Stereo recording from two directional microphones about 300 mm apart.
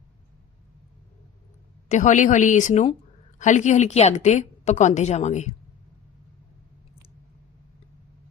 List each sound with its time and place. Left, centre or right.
1.9 s a woman's voice: left